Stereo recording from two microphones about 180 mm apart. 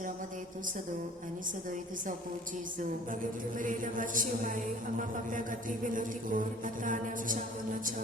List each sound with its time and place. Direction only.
3.6 s a woman's voice: 45° right (ahead or behind)